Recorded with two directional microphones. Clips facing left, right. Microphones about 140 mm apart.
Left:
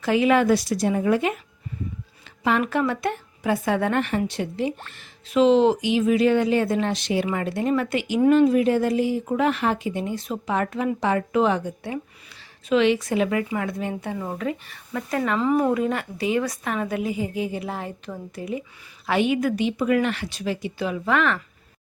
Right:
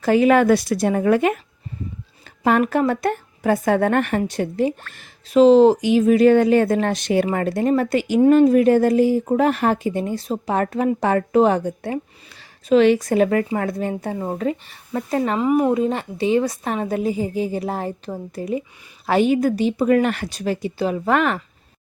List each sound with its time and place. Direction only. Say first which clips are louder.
0.0 s a woman's voice: right 4 dB; 45° right (ahead or behind)
2.4 s speech: right 4 dB; 45° right (ahead or behind)
15.4 s speech: right 3 dB; 15° right (ahead or behind); by 21.4 s 40° right (ahead or behind)